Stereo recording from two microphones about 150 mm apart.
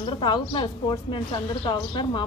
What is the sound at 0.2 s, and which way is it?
Speech, 30° left (ahead or behind).